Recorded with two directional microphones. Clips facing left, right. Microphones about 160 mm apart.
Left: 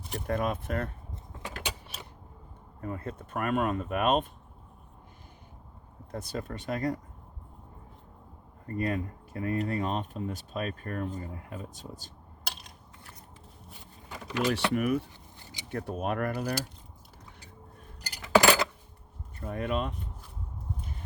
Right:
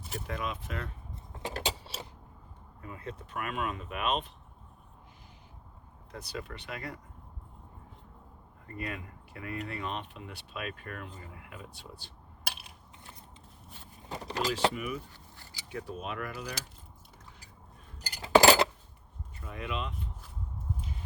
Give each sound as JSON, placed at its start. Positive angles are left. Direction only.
{"t": 0.3, "sound": "speech", "side_deg": 50}
{"t": 1.4, "sound": "a sound", "side_deg": -30}
{"t": 2.8, "sound": "speech", "side_deg": 45}
{"t": 6.1, "sound": "speech", "side_deg": 50}
{"t": 8.6, "sound": "speech", "side_deg": 40}
{"t": 12.5, "sound": "a sound", "side_deg": -5}
{"t": 14.1, "sound": "vehicle", "side_deg": -35}
{"t": 14.7, "sound": "speech", "side_deg": 60}
{"t": 18.2, "sound": "cutlery", "side_deg": -25}
{"t": 19.4, "sound": "speech", "side_deg": 50}